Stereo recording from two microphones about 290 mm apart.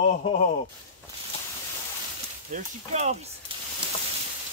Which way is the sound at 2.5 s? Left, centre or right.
Right.